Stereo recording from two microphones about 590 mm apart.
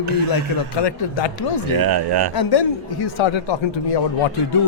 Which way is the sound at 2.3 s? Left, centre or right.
Left.